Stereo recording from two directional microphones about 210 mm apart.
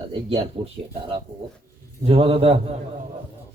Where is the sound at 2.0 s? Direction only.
25° right (ahead or behind).